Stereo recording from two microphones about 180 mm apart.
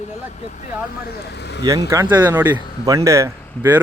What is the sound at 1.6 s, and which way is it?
Speech, 20° right (ahead or behind).